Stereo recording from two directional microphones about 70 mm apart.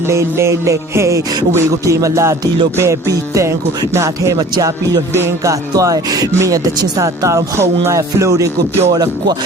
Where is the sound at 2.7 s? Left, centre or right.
Right.